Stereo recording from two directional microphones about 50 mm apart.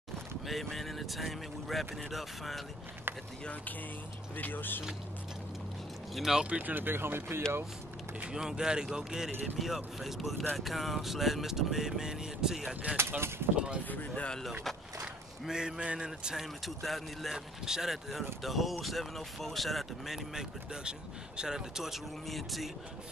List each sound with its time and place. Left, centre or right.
0.7 s speech: centre
4.4 s speech: left
6.1 s speech: centre
6.5 s speech: right
8.3 s speech: centre
12.9 s speech: right
13.8 s speech: left
15.4 s speech: centre
16.3 s speech: centre
20.3 s speech: centre